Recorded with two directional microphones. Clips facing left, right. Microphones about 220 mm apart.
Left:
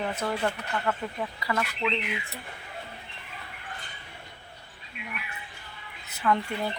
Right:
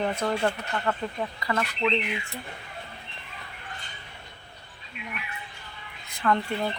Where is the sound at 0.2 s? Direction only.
45° right (ahead or behind).